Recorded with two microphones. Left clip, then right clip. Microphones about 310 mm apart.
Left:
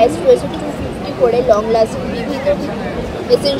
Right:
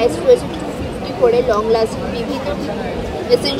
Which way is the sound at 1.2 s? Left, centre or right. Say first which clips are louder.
Even; centre.